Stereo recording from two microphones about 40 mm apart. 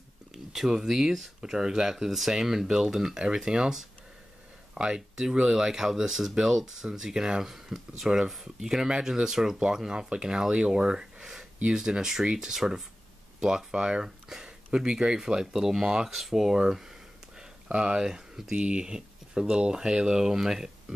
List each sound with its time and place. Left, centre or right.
0.5 s speech: centre
8.8 s speech: centre
9.6 s speech: right
17.6 s speech: right
18.0 s speech: centre
18.5 s speech: right